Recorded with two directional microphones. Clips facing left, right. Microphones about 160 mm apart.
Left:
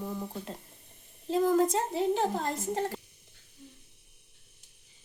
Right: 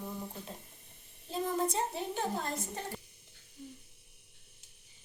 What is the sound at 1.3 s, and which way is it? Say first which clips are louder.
A woman's voice: left 8 dB; 90° left.